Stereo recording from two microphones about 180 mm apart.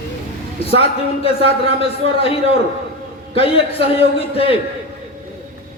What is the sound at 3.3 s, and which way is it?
A man's voice, 30° left (ahead or behind).